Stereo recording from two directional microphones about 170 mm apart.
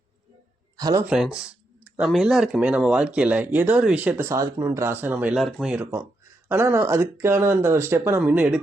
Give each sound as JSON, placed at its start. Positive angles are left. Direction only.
{"t": 0.8, "sound": "speech", "side_deg": -20}
{"t": 1.0, "sound": "speech", "side_deg": -5}